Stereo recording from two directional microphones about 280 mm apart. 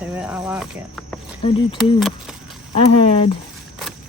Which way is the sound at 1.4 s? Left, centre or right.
Centre.